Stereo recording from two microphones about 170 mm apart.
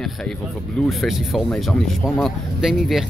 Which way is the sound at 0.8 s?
Centre (ahead or behind).